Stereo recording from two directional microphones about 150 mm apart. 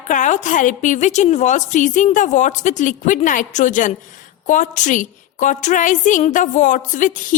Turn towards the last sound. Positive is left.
turn(degrees=60)  # may be behind; listen again after turning